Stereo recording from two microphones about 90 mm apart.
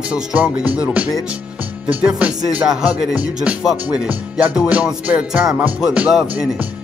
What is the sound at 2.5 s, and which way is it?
Music, 15° right (ahead or behind).